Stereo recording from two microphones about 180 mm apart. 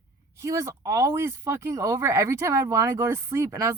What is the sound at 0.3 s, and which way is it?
Speech, 15° right (ahead or behind).